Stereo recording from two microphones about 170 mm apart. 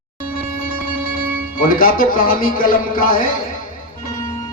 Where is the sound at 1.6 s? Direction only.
55° left (ahead or behind).